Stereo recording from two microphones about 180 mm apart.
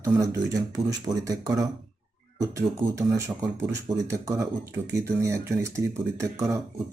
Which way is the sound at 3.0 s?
15° right (ahead or behind).